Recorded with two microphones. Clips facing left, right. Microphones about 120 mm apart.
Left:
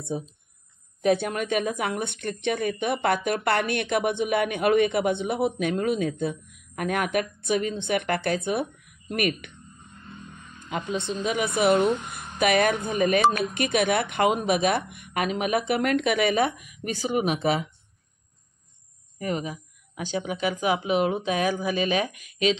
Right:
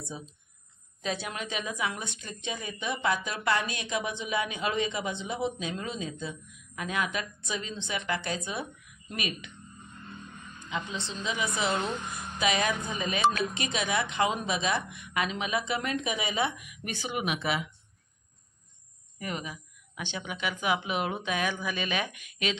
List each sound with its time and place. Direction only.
1.0 s a woman's voice: 55° left (ahead or behind)
10.7 s a woman's voice: 50° left (ahead or behind); by 16.4 s 65° left (ahead or behind)
16.4 s speech: 40° left (ahead or behind)
19.1 s speech: 40° left (ahead or behind)